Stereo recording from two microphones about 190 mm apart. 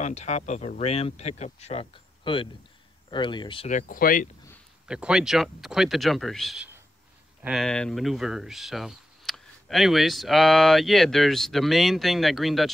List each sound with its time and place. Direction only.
0.0 s speech: 40° left (ahead or behind)
3.6 s speech: 45° left (ahead or behind)
4.8 s speech: 5° right (ahead or behind)